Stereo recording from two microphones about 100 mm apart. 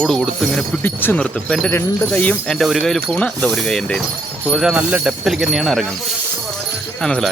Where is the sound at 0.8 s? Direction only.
20° left (ahead or behind); by 4.0 s 5° left (ahead or behind).